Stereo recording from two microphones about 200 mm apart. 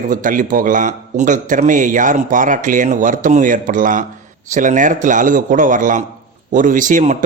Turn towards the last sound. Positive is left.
turn(degrees=-40)  # may be behind; listen again after turning